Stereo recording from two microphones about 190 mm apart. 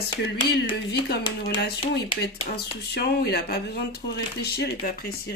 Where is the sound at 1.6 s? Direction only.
60° left (ahead or behind).